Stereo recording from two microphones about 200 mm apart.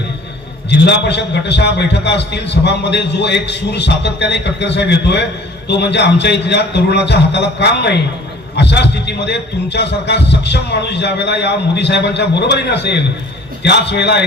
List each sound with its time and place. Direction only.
0.7 s a man's voice: 60° left (ahead or behind)